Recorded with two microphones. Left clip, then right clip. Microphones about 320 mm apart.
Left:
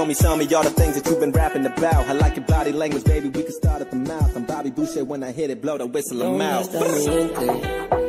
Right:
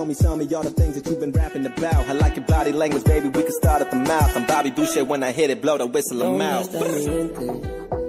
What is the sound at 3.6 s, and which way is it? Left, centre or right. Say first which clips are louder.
Music: right 7 dB; right.